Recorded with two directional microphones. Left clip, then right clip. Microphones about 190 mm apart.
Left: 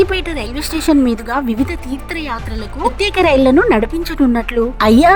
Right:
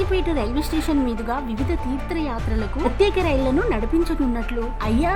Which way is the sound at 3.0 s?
40° left (ahead or behind).